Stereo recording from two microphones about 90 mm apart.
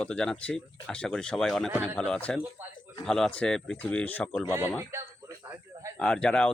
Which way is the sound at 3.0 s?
5° left (ahead or behind).